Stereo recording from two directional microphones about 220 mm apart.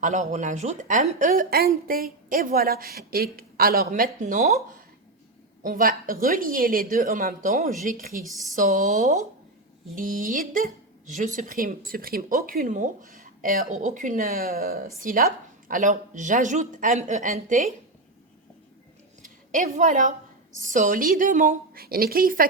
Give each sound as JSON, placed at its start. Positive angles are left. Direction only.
{"t": 0.0, "sound": "speech", "side_deg": -35}
{"t": 5.6, "sound": "speech", "side_deg": -40}
{"t": 19.2, "sound": "a woman's voice", "side_deg": -35}